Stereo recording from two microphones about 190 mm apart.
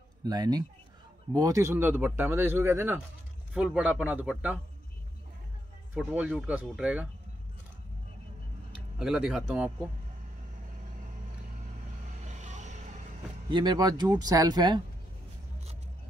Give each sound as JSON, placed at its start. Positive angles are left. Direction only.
{"t": 0.2, "sound": "speech", "side_deg": -20}
{"t": 5.9, "sound": "speech", "side_deg": -5}
{"t": 8.9, "sound": "speech", "side_deg": -5}
{"t": 12.3, "sound": "vehicle", "side_deg": -40}
{"t": 13.5, "sound": "speech", "side_deg": -25}